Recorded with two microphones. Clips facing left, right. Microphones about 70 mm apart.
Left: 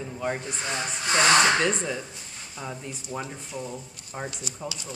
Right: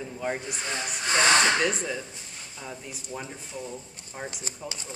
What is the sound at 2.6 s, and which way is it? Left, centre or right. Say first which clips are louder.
Speech: left 4 dB; centre.